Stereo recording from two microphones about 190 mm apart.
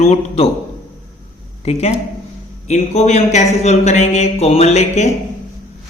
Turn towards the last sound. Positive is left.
turn(degrees=35)  # may be behind; listen again after turning